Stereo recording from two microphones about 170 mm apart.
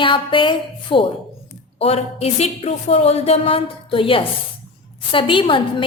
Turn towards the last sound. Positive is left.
turn(degrees=30)  # may be behind; listen again after turning